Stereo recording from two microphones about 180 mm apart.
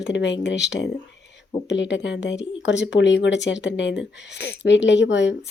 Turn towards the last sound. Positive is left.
turn(degrees=80)